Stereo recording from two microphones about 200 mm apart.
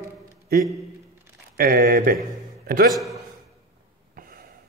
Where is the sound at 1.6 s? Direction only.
50° right (ahead or behind).